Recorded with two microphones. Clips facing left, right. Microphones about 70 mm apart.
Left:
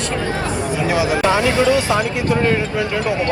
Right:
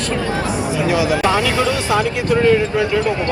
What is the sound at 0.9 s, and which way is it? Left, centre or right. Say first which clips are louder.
Speech: even; left.